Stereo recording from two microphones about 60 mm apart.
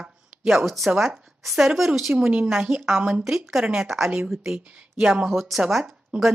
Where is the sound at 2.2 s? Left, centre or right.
Centre.